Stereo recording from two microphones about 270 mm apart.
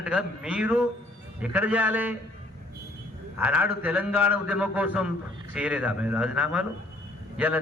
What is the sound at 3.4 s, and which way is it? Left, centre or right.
A man's voice, centre.